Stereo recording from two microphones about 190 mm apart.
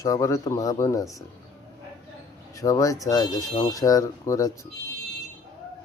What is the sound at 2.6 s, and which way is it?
Speech, 20° left (ahead or behind).